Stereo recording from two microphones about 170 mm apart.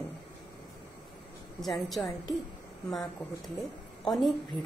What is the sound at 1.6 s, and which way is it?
A woman's voice, centre (ahead or behind).